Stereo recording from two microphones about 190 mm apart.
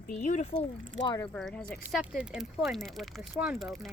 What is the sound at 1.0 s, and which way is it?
Speech, 20° left (ahead or behind).